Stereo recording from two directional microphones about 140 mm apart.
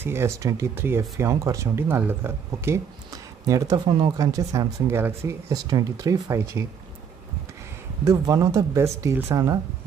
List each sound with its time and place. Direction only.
0.0 s speech: 20° right (ahead or behind)
8.0 s speech: 25° right (ahead or behind)